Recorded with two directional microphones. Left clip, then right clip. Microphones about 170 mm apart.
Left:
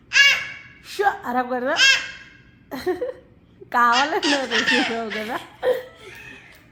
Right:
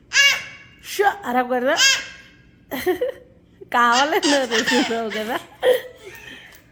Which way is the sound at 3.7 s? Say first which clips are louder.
Right 1 dB; 30° right (ahead or behind).